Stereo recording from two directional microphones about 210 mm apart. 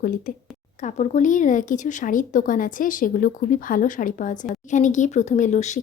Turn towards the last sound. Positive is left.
turn(degrees=35)  # may be behind; listen again after turning